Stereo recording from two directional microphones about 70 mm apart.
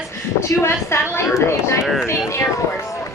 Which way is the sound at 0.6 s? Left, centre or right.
Left.